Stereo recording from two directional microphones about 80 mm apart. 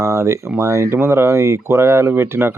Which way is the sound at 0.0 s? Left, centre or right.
Right.